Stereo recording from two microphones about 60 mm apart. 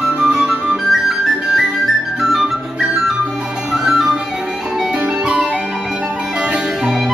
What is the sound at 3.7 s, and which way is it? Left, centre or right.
Music, centre.